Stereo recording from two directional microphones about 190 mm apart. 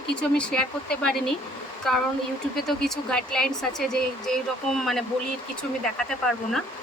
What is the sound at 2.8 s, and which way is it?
Speech, 5° left (ahead or behind).